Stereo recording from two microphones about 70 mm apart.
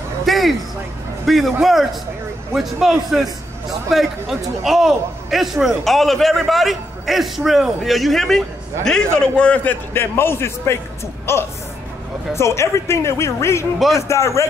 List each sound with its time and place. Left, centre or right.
0.2 s a sound: centre
1.2 s a man's voice: centre
9.9 s a man's voice: left
13.7 s a man's voice: centre
14.0 s speech: left